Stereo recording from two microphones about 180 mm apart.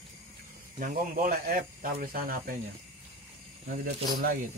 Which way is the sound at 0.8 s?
50° right (ahead or behind).